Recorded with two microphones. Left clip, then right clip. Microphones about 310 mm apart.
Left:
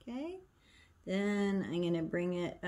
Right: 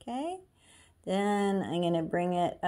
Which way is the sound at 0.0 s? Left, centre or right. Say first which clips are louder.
Right 8 dB; centre.